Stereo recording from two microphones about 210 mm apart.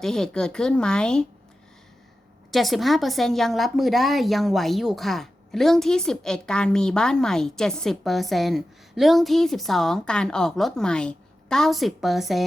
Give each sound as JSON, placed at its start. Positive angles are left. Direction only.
{"t": 0.0, "sound": "a woman's voice", "side_deg": 5}
{"t": 2.5, "sound": "a woman's voice", "side_deg": 0}